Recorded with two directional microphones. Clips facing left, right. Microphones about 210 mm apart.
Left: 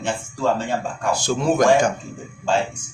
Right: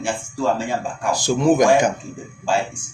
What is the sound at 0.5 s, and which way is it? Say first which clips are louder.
Speech: even; 15° right (ahead or behind).